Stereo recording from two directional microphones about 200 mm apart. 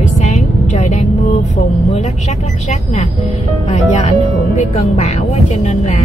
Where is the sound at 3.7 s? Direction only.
35° left (ahead or behind).